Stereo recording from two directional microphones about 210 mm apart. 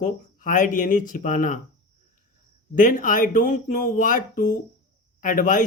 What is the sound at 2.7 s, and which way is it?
Speech, 40° left (ahead or behind).